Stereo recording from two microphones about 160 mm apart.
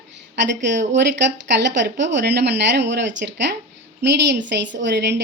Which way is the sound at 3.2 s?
75° right (ahead or behind).